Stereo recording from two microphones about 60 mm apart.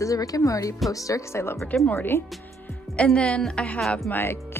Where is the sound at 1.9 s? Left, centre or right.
Left.